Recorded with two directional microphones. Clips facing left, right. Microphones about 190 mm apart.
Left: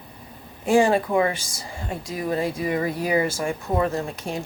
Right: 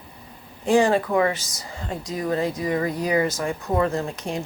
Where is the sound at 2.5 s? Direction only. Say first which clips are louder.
Even; 25° left (ahead or behind).